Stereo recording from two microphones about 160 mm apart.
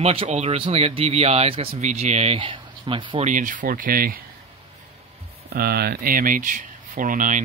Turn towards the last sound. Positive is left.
turn(degrees=-55)  # may be behind; listen again after turning